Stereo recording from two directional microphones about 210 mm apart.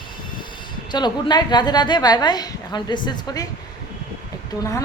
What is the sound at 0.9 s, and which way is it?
A woman's voice, 20° left (ahead or behind).